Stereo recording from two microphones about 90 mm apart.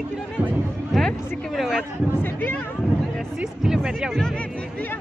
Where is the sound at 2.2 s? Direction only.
25° left (ahead or behind).